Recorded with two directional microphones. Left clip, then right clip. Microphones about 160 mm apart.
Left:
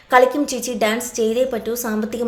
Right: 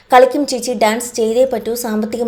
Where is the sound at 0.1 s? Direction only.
20° right (ahead or behind).